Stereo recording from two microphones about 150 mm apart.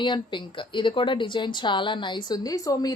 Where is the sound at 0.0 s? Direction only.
30° left (ahead or behind).